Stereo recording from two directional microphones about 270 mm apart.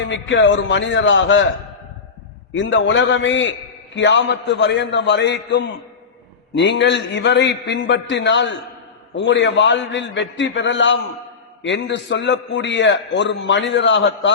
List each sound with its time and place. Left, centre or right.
0.1 s a man's voice: left
2.5 s a man's voice: left